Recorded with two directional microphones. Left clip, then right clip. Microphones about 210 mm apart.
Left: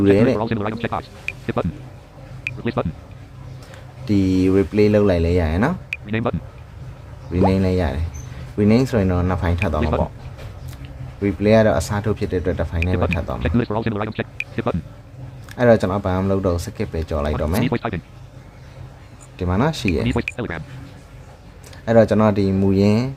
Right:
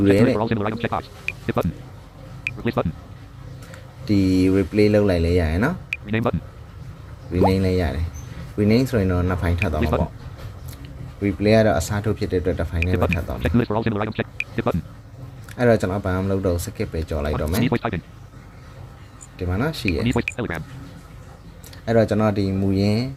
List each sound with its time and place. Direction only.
0.0 s speech: 5° left (ahead or behind)
2.4 s a sound: centre (ahead or behind)
4.0 s speech: 5° left (ahead or behind)
7.3 s speech: 5° left (ahead or behind)
11.2 s speech: 5° left (ahead or behind)
19.4 s speech: 15° left (ahead or behind)
20.1 s speech: centre (ahead or behind)
21.8 s speech: 10° left (ahead or behind)